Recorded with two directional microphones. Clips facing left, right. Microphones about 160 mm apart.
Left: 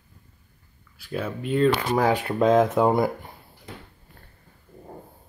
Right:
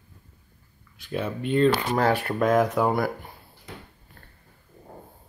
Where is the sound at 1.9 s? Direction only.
15° left (ahead or behind).